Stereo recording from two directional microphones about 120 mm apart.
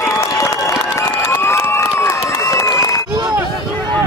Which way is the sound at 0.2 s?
25° left (ahead or behind).